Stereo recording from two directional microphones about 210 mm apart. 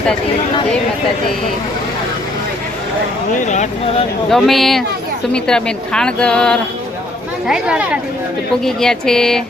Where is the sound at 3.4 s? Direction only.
35° left (ahead or behind).